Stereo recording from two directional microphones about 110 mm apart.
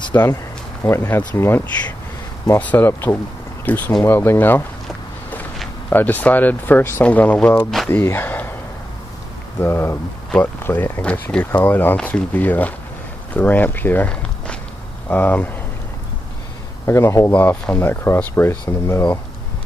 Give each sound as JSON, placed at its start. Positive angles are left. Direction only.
{"t": 0.1, "sound": "speech", "side_deg": 25}
{"t": 5.9, "sound": "speech", "side_deg": 15}
{"t": 9.6, "sound": "speech", "side_deg": 20}
{"t": 16.8, "sound": "speech", "side_deg": 25}
{"t": 17.3, "sound": "speech", "side_deg": 15}